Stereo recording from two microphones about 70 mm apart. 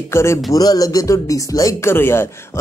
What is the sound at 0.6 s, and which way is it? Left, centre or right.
Speech, left.